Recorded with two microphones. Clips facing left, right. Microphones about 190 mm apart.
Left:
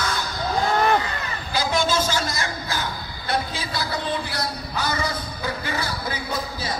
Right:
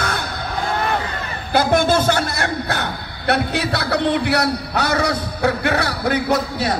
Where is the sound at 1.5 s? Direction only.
60° right (ahead or behind).